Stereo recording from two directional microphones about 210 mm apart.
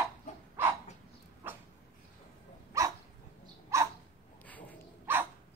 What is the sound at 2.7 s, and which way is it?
Dog, 15° right (ahead or behind).